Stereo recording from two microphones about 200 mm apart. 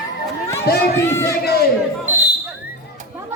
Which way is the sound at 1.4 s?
50° left (ahead or behind).